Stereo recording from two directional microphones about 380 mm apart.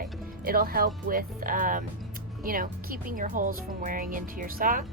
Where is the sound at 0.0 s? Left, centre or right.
Right.